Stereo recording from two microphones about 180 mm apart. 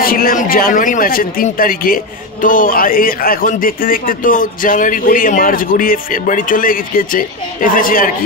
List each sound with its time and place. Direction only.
0.0 s a man's voice: 55° left (ahead or behind)